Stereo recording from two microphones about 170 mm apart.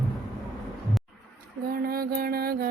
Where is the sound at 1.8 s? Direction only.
60° right (ahead or behind).